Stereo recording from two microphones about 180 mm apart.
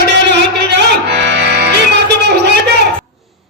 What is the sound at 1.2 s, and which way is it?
Music, 70° right (ahead or behind).